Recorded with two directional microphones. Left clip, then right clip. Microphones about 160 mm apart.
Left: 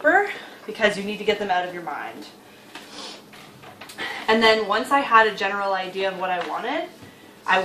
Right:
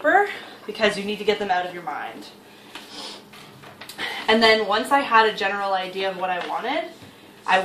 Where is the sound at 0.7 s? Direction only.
10° left (ahead or behind).